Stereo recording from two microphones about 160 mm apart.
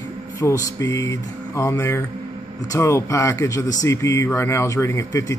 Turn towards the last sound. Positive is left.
turn(degrees=20)  # may be behind; listen again after turning